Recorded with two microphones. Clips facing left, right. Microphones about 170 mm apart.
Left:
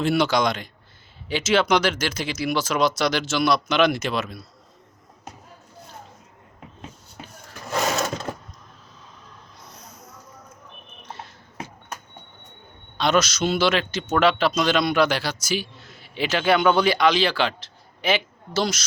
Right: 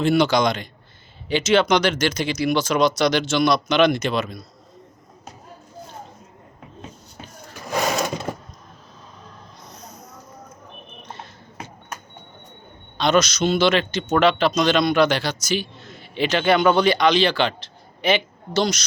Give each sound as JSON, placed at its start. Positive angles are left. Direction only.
{"t": 0.0, "sound": "a man's voice", "side_deg": 0}
{"t": 7.6, "sound": "sewing machine", "side_deg": -15}
{"t": 9.6, "sound": "a sound", "side_deg": 10}
{"t": 13.0, "sound": "a man's voice", "side_deg": 5}